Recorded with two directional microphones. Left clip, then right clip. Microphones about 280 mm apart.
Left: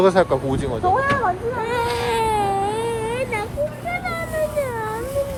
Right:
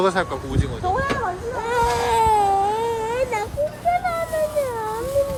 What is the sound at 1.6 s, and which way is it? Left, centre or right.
Baby cry, right.